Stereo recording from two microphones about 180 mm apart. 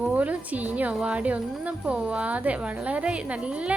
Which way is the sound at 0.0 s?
10° right (ahead or behind).